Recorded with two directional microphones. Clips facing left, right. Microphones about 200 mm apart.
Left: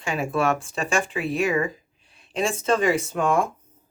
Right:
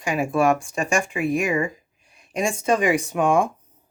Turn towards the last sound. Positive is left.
turn(degrees=-15)  # may be behind; listen again after turning